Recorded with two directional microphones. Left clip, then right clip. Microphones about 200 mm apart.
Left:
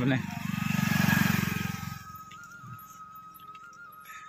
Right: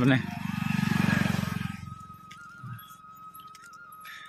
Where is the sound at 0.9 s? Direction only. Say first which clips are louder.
Left 3 dB; 55° left (ahead or behind); by 1.7 s 40° left (ahead or behind).